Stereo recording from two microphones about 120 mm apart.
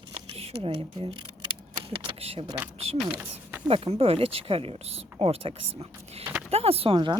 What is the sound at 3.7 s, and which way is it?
Speech, 50° right (ahead or behind).